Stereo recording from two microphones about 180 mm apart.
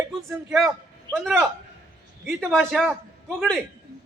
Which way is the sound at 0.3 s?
Centre (ahead or behind).